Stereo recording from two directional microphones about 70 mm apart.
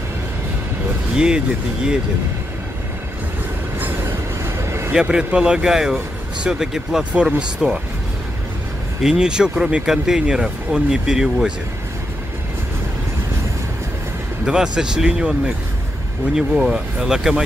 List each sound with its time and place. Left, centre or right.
1.1 s speech: centre
3.8 s train: right
4.9 s speech: centre
9.0 s speech: centre
14.4 s speech: centre